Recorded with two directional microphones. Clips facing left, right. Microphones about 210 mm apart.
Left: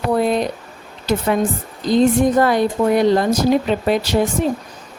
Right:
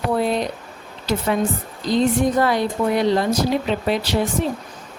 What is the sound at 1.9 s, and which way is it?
Speech, 50° left (ahead or behind).